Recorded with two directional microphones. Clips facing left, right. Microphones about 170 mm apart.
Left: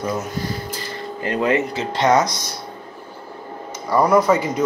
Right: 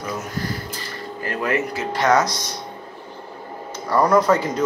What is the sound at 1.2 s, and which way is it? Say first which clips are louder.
Speech: left 4 dB; 20° left (ahead or behind).